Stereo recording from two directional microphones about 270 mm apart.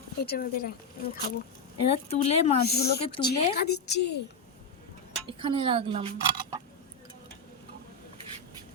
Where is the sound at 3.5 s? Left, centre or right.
Left.